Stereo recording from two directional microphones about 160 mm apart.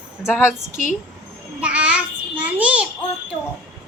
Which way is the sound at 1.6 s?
5° right (ahead or behind).